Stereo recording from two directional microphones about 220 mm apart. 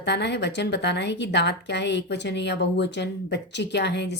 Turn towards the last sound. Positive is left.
turn(degrees=50)  # may be behind; listen again after turning